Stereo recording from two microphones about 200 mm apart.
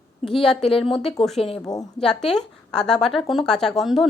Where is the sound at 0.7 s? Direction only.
30° left (ahead or behind).